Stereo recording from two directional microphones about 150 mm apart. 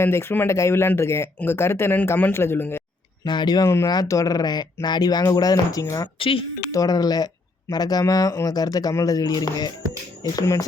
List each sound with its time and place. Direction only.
0.0 s speech: 15° left (ahead or behind)
3.2 s speech: 30° left (ahead or behind)
6.1 s speech: 35° left (ahead or behind)
6.7 s speech: 25° left (ahead or behind)